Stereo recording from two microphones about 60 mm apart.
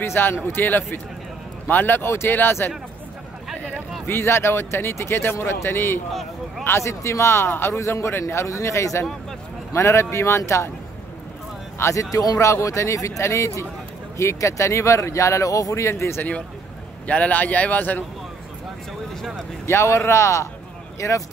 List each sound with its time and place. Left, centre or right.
0.0 s speech: left
4.1 s speech: left
6.6 s speech: left
7.8 s a man's voice: left
11.8 s speech: left
12.4 s speech: left
17.1 s speech: left
19.6 s speech: left